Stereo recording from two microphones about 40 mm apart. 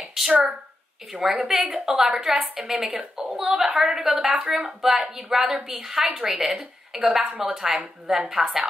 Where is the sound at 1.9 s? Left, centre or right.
Centre.